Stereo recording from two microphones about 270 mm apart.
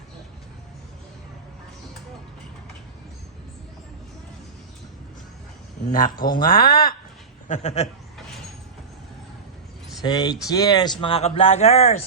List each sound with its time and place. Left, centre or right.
5.9 s speech: left
10.0 s speech: centre